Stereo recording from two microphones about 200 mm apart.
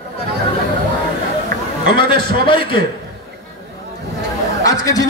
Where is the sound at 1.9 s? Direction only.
25° left (ahead or behind).